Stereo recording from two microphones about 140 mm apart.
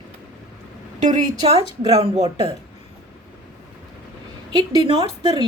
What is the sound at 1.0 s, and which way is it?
A woman's voice, 50° right (ahead or behind).